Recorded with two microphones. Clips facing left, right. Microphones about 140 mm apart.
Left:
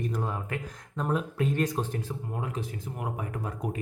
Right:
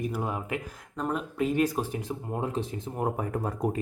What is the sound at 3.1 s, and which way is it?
Speech, 40° right (ahead or behind).